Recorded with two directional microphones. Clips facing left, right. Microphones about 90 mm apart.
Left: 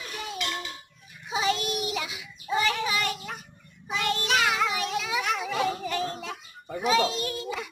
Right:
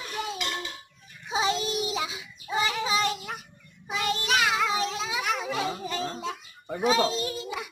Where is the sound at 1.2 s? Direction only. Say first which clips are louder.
Even; 25° right (ahead or behind).